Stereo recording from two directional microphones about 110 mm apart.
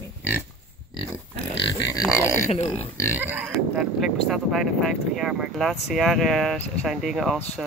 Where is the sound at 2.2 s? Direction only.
25° left (ahead or behind).